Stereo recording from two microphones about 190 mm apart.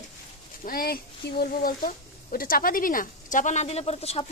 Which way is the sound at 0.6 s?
50° left (ahead or behind).